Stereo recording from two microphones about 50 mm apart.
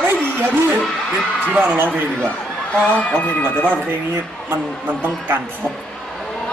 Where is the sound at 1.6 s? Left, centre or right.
Right.